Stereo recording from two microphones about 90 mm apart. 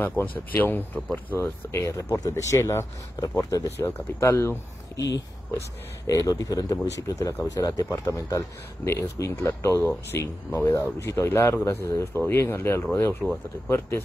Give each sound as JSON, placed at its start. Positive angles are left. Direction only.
{"t": 0.2, "sound": "speech", "side_deg": 20}
{"t": 1.4, "sound": "speech", "side_deg": 30}
{"t": 3.8, "sound": "speech", "side_deg": 30}
{"t": 6.0, "sound": "speech", "side_deg": 40}
{"t": 8.9, "sound": "speech", "side_deg": 25}